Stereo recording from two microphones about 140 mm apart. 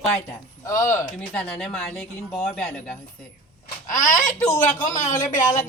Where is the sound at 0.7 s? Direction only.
20° left (ahead or behind).